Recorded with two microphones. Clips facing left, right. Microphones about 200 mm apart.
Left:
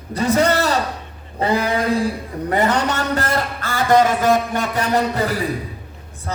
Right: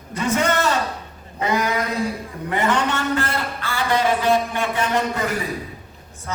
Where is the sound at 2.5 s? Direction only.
40° left (ahead or behind).